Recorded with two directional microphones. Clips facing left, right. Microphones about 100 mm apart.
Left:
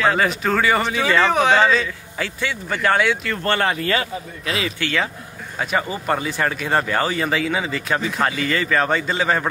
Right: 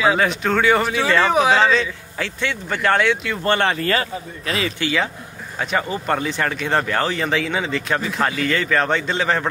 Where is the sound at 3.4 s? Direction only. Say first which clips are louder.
Right 2 dB; 20° right (ahead or behind).